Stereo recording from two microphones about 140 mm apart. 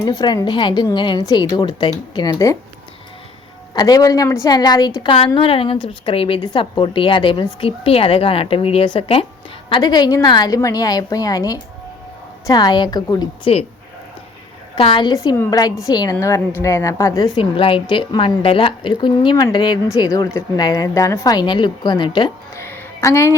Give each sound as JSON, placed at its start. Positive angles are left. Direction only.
{"t": 0.0, "sound": "a woman's voice", "side_deg": 30}
{"t": 3.8, "sound": "a woman's voice", "side_deg": 25}
{"t": 14.8, "sound": "a woman's voice", "side_deg": 40}
{"t": 15.1, "sound": "a woman's voice", "side_deg": 25}
{"t": 17.3, "sound": "a woman's voice", "side_deg": 40}
{"t": 22.5, "sound": "a sound", "side_deg": 20}